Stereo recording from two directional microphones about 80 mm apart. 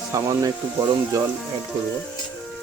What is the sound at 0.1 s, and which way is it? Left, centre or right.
Speech, right.